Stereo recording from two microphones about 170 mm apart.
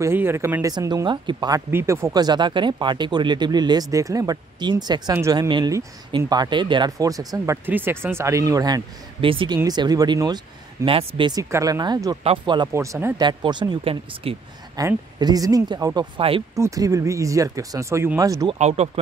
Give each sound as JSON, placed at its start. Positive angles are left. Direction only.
{"t": 0.0, "sound": "speech", "side_deg": -15}
{"t": 1.7, "sound": "speech", "side_deg": -15}
{"t": 12.7, "sound": "speech", "side_deg": -15}
{"t": 16.5, "sound": "speech", "side_deg": -20}
{"t": 18.5, "sound": "speech", "side_deg": -40}